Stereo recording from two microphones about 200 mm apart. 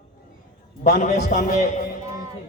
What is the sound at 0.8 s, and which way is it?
Speech, 35° left (ahead or behind).